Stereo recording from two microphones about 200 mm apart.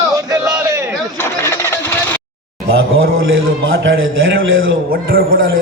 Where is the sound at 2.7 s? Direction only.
80° right.